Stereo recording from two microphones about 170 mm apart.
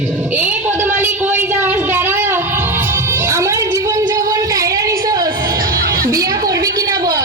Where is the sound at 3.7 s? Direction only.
20° right (ahead or behind).